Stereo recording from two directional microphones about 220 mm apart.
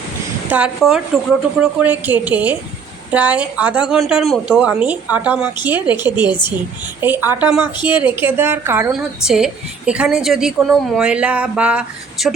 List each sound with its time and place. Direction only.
0.5 s a woman's voice: 5° right (ahead or behind)